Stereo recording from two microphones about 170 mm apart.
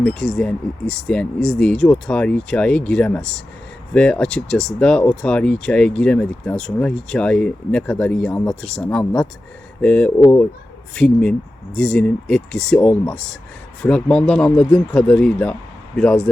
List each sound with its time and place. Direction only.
0.0 s speech: 5° left (ahead or behind)
12.8 s speech: 15° left (ahead or behind)